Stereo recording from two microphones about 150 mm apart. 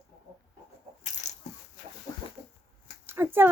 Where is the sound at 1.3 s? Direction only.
50° left (ahead or behind).